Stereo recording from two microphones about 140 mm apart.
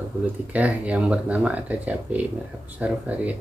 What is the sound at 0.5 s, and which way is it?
Speech, 10° right (ahead or behind).